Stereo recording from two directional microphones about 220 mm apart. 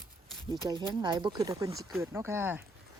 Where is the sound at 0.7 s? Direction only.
20° right (ahead or behind).